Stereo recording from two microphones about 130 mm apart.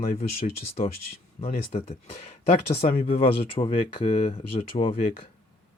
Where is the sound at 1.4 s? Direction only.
90° left.